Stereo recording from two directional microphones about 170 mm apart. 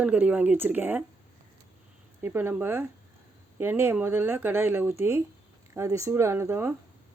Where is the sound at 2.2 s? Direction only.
15° right (ahead or behind).